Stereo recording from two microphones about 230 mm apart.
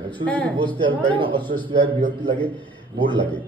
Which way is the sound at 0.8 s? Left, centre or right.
Right.